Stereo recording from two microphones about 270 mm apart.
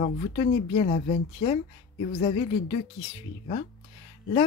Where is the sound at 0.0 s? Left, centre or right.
Left.